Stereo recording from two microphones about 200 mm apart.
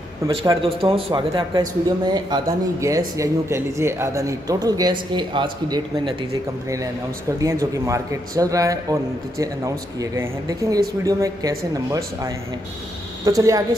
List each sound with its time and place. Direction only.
0.5 s speech: 25° right (ahead or behind)
7.3 s speech: 15° right (ahead or behind)